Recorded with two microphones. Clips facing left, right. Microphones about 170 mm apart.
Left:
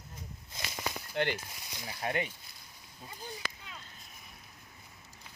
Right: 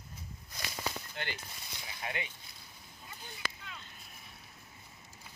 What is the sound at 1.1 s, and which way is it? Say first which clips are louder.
Speech: left 10 dB; 60° left (ahead or behind).